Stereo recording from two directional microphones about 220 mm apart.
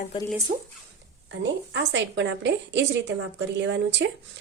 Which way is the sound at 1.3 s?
55° right (ahead or behind).